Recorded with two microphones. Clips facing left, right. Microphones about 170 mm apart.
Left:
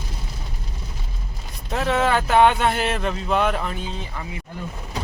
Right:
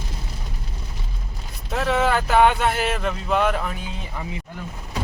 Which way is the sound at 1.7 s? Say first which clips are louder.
Even; centre (ahead or behind).